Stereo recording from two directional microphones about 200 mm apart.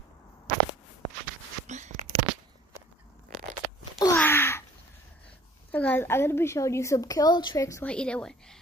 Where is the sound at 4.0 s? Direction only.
10° left (ahead or behind).